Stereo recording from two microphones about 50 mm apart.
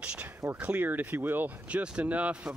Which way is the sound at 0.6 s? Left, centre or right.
Right.